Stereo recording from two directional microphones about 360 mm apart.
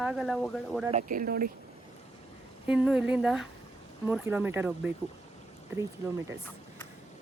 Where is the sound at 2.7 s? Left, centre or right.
Centre.